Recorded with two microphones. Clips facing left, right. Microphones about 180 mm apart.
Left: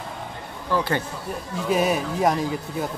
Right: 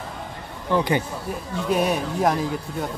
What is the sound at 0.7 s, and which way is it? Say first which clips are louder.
Speech: right 2 dB; 15° right (ahead or behind).